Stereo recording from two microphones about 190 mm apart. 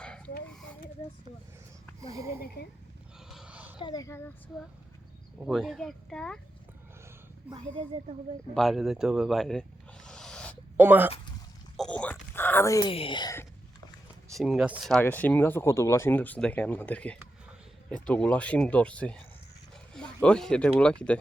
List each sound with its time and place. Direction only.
2.1 s speech: 15° right (ahead or behind)
3.2 s a sound: 5° right (ahead or behind)
3.8 s speech: 20° left (ahead or behind)
5.5 s speech: centre (ahead or behind)
7.5 s speech: 10° right (ahead or behind)
8.5 s snake: centre (ahead or behind)
10.8 s speech: 10° right (ahead or behind)
11.8 s a sound: 5° left (ahead or behind)
12.9 s speech: 30° left (ahead or behind)
14.3 s speech: centre (ahead or behind)